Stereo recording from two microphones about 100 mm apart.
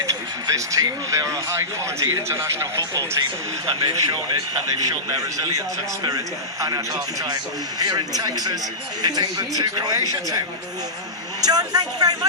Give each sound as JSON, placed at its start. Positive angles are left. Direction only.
{"t": 0.0, "sound": "speech", "side_deg": -35}
{"t": 3.8, "sound": "speech", "side_deg": -45}